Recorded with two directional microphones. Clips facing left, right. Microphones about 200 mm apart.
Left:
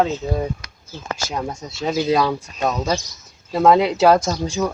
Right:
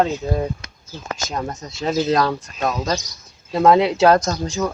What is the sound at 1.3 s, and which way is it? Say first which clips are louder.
Speech: right 1 dB; 10° left (ahead or behind).